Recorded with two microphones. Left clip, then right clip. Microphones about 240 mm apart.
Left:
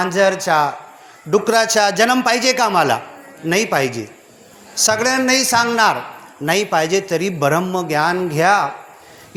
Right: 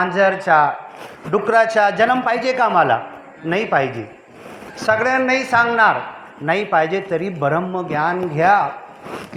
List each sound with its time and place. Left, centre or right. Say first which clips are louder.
0.0 s a man's voice: even; left